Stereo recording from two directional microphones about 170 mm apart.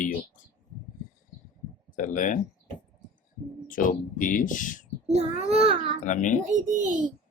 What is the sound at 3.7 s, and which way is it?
Speech, 50° left (ahead or behind).